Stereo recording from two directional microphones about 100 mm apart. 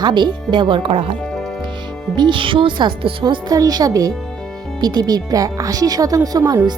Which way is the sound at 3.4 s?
40° right (ahead or behind).